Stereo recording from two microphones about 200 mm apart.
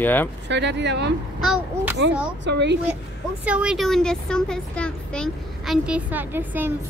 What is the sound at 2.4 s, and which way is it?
Speech, 60° right (ahead or behind).